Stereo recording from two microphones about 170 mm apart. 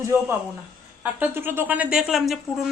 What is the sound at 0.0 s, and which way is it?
A woman's voice, 15° right (ahead or behind).